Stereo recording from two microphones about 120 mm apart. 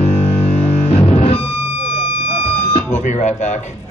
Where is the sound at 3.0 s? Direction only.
75° left (ahead or behind).